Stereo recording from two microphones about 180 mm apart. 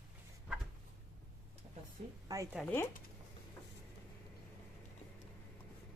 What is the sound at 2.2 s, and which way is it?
Speech, 20° right (ahead or behind).